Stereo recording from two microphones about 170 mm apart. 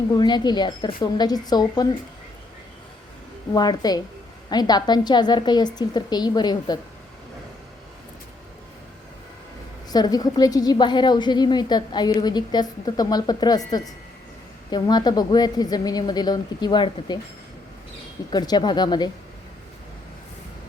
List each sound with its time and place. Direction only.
0.1 s a woman's voice: 25° left (ahead or behind)
3.5 s a woman's voice: 25° left (ahead or behind)
9.9 s a woman's voice: 25° left (ahead or behind)
18.3 s a woman's voice: 25° left (ahead or behind)